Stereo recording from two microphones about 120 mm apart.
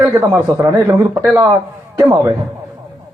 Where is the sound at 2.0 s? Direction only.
25° right (ahead or behind).